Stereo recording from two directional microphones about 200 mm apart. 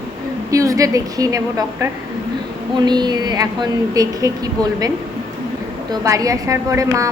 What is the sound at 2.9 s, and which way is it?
A woman's voice, 20° right (ahead or behind).